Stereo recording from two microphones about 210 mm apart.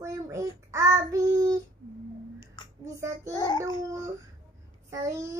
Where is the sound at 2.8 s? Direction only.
15° right (ahead or behind).